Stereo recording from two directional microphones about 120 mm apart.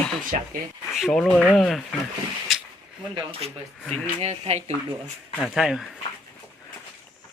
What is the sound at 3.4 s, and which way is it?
Speech, 55° right (ahead or behind).